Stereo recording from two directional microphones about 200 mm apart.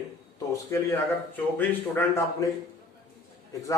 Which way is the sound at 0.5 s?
15° left (ahead or behind).